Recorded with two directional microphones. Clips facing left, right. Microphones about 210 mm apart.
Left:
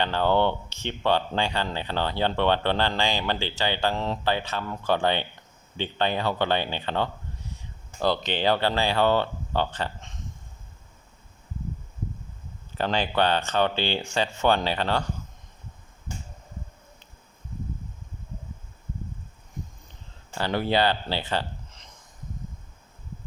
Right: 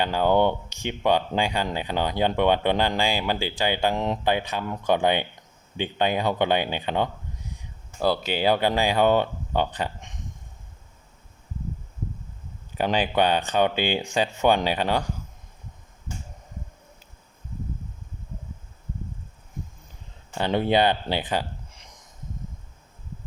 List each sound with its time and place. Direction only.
0.0 s speech: 10° right (ahead or behind)
12.7 s speech: 15° right (ahead or behind)
20.4 s speech: 20° right (ahead or behind)